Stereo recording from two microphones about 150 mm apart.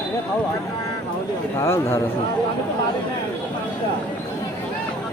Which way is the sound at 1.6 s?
15° left (ahead or behind).